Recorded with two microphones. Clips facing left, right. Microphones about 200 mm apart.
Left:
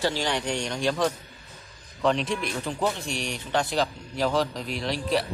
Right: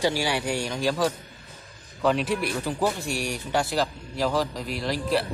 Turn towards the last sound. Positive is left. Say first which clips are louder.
# right 1 dB
turn(degrees=0)  # may be behind; listen again after turning